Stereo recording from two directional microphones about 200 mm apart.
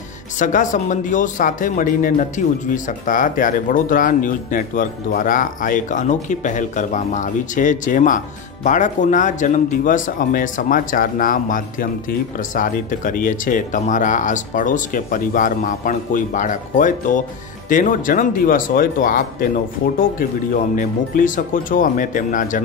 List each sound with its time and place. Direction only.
0.4 s speech: 40° left (ahead or behind)